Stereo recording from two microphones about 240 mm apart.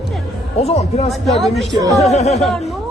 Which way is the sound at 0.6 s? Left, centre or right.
Left.